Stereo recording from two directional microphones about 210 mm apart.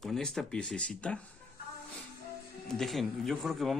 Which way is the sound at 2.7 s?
Centre (ahead or behind).